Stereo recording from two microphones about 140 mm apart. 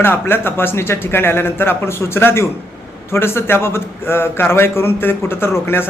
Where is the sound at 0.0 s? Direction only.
15° left (ahead or behind).